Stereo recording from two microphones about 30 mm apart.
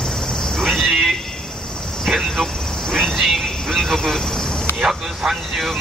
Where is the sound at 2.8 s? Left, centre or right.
Centre.